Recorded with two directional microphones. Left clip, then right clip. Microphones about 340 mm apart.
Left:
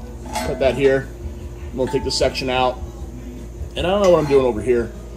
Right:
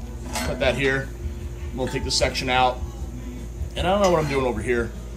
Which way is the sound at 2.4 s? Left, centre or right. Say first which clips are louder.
Right 2 dB; right.